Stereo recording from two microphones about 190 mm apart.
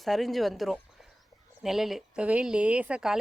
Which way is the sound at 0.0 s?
Centre (ahead or behind).